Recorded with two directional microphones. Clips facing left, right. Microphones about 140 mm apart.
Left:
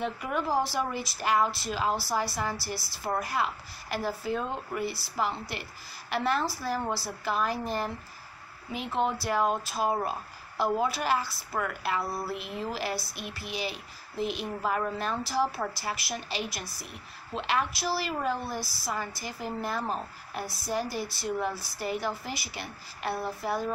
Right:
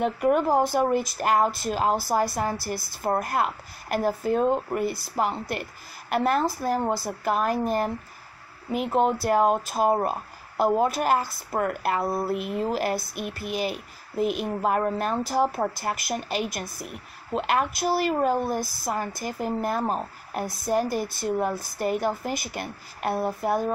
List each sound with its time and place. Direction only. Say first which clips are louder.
0.0 s speech: right 9 dB; 50° right (ahead or behind)